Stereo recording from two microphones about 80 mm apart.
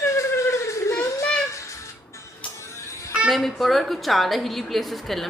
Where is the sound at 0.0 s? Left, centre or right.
Left.